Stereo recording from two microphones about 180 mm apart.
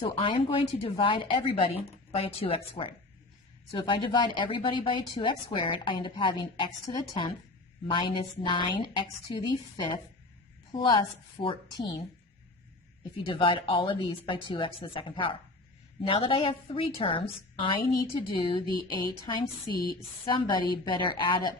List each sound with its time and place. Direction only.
0.0 s a woman's voice: 30° left (ahead or behind)
13.1 s speech: 30° left (ahead or behind)
20.2 s speech: 25° left (ahead or behind)